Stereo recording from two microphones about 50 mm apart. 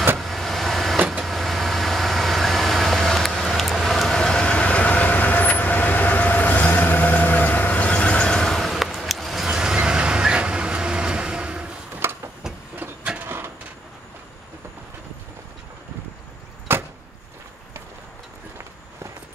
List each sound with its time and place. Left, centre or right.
0.2 s vehicle: centre
0.9 s vehicle: right
1.2 s vehicle: centre
9.5 s neigh: centre
11.9 s a sound: right
13.2 s a sound: right
16.7 s vehicle: right